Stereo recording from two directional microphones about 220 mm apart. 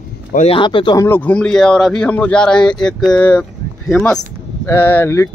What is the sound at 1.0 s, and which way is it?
A man's voice, 10° left (ahead or behind).